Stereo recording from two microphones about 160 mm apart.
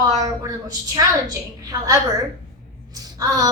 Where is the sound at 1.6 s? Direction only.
25° right (ahead or behind).